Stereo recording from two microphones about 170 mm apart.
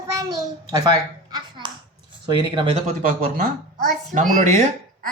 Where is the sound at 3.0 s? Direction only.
60° right (ahead or behind).